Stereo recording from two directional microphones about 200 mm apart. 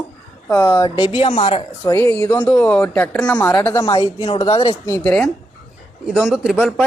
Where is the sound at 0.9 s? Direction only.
25° left (ahead or behind).